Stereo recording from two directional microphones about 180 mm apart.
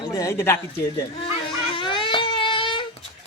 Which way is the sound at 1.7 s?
30° left (ahead or behind).